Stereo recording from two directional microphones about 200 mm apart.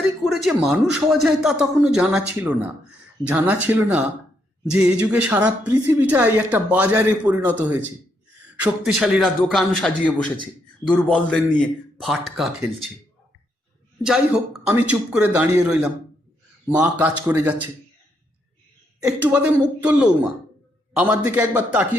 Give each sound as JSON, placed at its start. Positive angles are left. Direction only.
{"t": 0.0, "sound": "a man's voice", "side_deg": 0}
{"t": 14.0, "sound": "a man's voice", "side_deg": -5}
{"t": 18.9, "sound": "a woman's voice", "side_deg": -5}